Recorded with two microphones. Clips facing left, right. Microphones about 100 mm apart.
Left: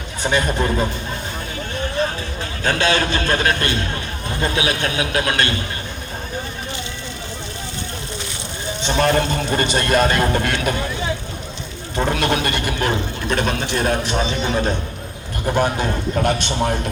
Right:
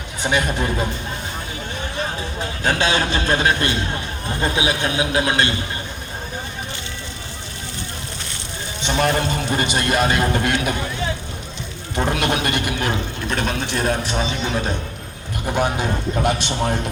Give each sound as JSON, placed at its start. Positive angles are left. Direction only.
{"t": 0.2, "sound": "a man's voice", "side_deg": -10}
{"t": 2.6, "sound": "a man's voice", "side_deg": -25}
{"t": 8.8, "sound": "a man's voice", "side_deg": -10}
{"t": 11.9, "sound": "a man's voice", "side_deg": -15}
{"t": 12.8, "sound": "speech", "side_deg": 0}
{"t": 15.5, "sound": "a man's voice", "side_deg": -10}